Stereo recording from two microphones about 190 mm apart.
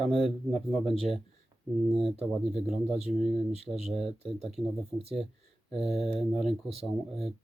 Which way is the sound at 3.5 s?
35° right (ahead or behind).